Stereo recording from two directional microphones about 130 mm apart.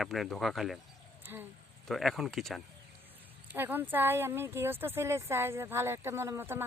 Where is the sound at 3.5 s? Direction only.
15° right (ahead or behind).